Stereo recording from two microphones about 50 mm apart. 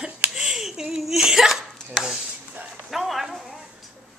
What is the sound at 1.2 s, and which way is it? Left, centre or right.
Cough, centre.